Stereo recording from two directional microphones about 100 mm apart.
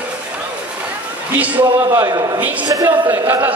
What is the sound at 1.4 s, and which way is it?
Speech, 15° right (ahead or behind).